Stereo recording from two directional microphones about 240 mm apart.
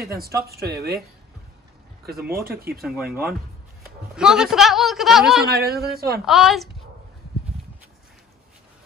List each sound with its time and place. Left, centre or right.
0.0 s speech: right
2.0 s speech: right
4.1 s a man's voice: centre
5.5 s speech: right
6.2 s a man's voice: centre